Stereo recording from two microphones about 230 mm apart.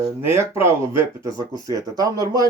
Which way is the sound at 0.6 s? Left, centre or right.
Centre.